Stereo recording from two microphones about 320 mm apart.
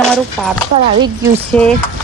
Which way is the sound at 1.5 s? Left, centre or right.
Centre.